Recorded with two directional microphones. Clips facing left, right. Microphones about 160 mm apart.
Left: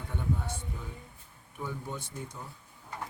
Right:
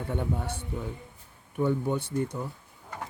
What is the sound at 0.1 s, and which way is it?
Speech, 60° right (ahead or behind).